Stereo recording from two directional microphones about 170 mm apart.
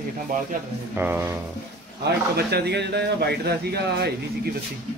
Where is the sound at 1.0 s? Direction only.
10° right (ahead or behind).